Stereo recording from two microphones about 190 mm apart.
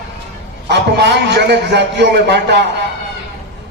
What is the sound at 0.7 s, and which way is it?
A man's voice, 65° right (ahead or behind).